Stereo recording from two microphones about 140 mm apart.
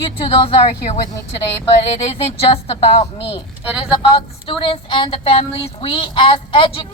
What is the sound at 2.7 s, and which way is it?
Speech, 45° left (ahead or behind).